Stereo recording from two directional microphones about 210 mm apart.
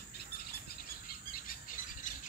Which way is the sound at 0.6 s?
45° left (ahead or behind).